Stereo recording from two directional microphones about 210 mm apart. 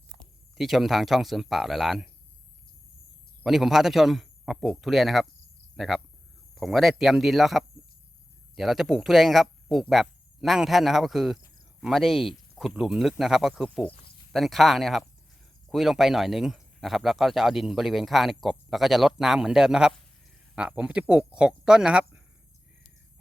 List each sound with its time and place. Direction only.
0.2 s speech: centre (ahead or behind)
3.4 s speech: centre (ahead or behind)
5.7 s cricket: centre (ahead or behind)
6.6 s speech: centre (ahead or behind)